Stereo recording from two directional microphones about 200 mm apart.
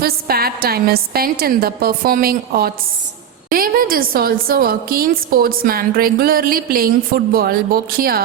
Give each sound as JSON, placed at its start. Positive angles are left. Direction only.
{"t": 0.0, "sound": "a woman's voice", "side_deg": -50}